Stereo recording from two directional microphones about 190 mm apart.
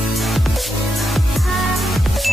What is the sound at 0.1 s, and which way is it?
Music, centre (ahead or behind).